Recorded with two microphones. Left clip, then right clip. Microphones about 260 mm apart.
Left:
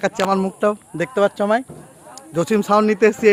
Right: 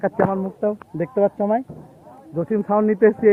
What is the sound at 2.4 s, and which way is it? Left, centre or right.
Speech, left.